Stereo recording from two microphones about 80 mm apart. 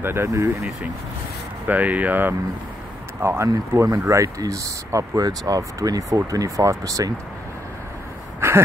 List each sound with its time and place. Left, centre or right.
0.0 s speech: right
1.7 s speech: centre
3.2 s speech: right
8.4 s a sound: right